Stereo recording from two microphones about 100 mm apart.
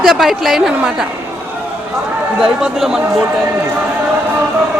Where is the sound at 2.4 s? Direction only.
5° right (ahead or behind).